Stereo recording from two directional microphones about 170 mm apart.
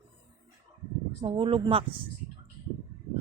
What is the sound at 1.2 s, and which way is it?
Speech, 30° right (ahead or behind).